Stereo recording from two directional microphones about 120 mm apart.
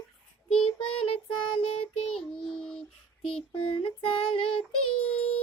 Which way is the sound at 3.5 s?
50° left (ahead or behind).